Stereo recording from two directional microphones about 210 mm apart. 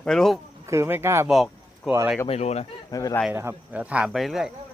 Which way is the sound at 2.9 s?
15° left (ahead or behind).